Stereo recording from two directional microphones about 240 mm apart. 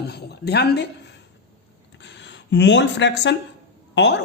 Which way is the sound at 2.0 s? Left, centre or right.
Left.